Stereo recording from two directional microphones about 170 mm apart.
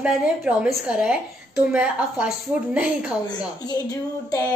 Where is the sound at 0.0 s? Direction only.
5° right (ahead or behind).